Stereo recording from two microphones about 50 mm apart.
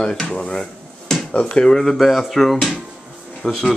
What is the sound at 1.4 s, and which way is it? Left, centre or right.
Speech, centre.